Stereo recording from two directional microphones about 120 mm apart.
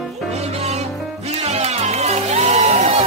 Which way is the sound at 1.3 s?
65° right (ahead or behind).